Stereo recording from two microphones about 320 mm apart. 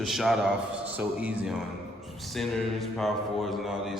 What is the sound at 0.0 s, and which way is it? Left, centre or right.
A man's voice, centre.